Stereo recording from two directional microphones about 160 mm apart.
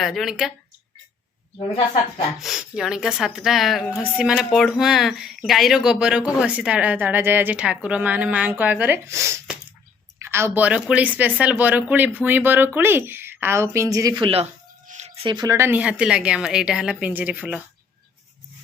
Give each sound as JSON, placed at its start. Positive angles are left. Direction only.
{"t": 0.0, "sound": "speech", "side_deg": 0}
{"t": 1.5, "sound": "speech", "side_deg": 30}
{"t": 2.4, "sound": "speech", "side_deg": 0}
{"t": 14.8, "sound": "speech", "side_deg": -45}